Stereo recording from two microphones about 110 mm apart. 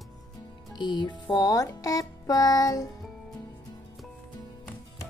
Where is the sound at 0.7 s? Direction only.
45° left (ahead or behind).